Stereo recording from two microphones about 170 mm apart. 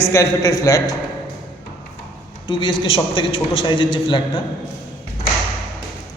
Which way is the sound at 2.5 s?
25° left (ahead or behind).